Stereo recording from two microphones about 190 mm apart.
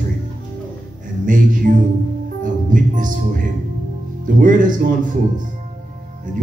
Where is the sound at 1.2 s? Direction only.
45° right (ahead or behind).